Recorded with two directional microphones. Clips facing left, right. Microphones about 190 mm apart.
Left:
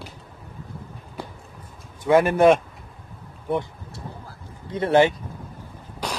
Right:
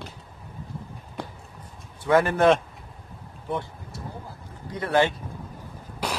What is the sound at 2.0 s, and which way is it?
Speech, 15° left (ahead or behind).